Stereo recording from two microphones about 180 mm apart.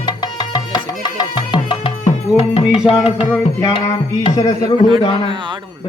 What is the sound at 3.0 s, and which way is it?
Music, 35° left (ahead or behind).